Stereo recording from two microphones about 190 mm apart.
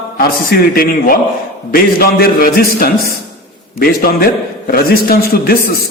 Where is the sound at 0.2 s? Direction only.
55° left (ahead or behind).